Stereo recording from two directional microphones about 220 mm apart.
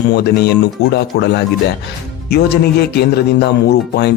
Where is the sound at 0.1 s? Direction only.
50° left (ahead or behind).